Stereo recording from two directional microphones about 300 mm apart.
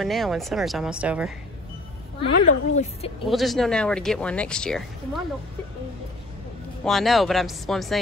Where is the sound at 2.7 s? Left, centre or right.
Left.